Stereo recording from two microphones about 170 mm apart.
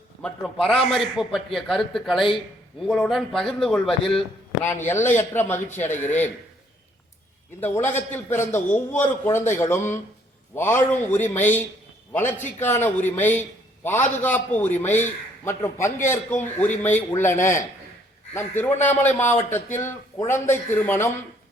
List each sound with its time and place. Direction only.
0.2 s speech: centre (ahead or behind)
4.6 s a man's voice: 15° left (ahead or behind)
7.6 s a man's voice: 10° left (ahead or behind)